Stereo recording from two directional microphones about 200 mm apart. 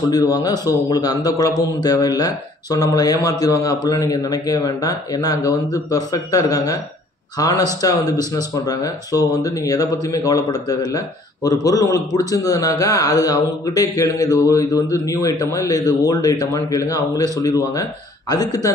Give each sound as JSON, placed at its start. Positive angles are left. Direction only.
{"t": 0.1, "sound": "speech", "side_deg": 20}